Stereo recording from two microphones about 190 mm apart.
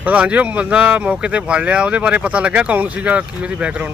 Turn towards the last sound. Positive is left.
turn(degrees=-5)  # may be behind; listen again after turning